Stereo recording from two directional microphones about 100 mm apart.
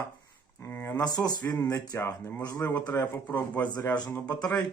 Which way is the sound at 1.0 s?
40° left (ahead or behind).